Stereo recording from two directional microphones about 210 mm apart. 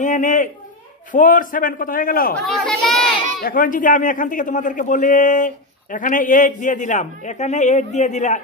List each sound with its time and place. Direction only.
0.0 s a man's voice: 40° left (ahead or behind)
2.4 s speech: 5° left (ahead or behind)
3.4 s a man's voice: 40° left (ahead or behind)